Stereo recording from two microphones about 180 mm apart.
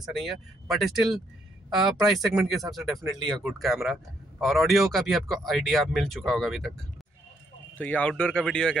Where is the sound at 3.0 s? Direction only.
20° right (ahead or behind).